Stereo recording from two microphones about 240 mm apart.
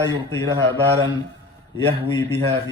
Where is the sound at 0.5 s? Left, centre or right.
Centre.